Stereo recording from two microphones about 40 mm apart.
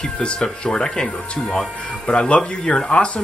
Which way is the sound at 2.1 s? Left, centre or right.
Left.